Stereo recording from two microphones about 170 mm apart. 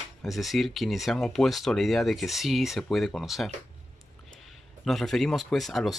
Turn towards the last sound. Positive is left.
turn(degrees=0)  # may be behind; listen again after turning